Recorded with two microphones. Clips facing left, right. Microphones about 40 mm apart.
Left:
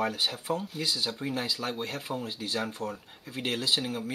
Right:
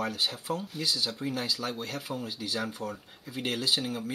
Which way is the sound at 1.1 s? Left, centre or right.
Centre.